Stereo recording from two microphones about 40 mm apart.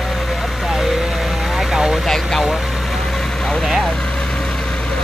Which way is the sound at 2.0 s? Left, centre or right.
Centre.